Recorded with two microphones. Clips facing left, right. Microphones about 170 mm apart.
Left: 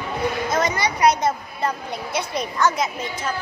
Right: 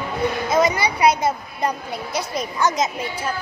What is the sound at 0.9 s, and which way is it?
A woman's voice, 10° right (ahead or behind).